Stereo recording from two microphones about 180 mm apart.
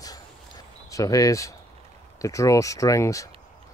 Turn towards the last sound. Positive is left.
turn(degrees=20)  # may be behind; listen again after turning